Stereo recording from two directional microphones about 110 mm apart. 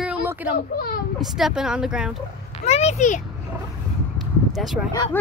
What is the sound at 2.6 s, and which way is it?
Speech, 80° left.